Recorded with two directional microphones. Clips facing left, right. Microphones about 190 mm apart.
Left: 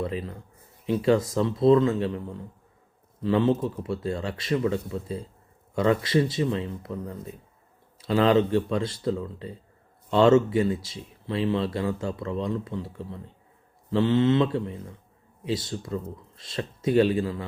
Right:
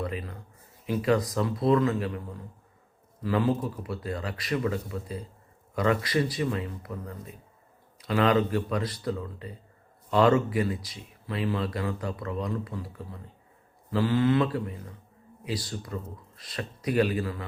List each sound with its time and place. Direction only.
0.0 s speech: 30° left (ahead or behind)